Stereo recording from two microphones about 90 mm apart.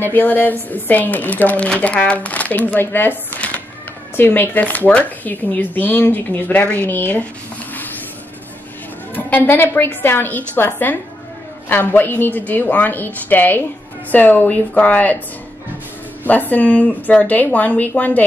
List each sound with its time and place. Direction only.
0.0 s speech: 20° left (ahead or behind)
9.1 s a woman's voice: 20° left (ahead or behind)
16.3 s a woman's voice: 20° left (ahead or behind)